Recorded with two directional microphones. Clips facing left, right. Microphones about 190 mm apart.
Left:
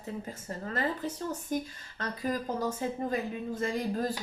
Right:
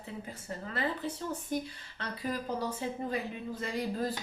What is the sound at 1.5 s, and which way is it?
Speech, 45° left (ahead or behind).